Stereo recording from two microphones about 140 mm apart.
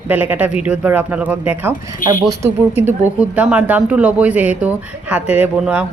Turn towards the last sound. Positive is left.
turn(degrees=-10)  # may be behind; listen again after turning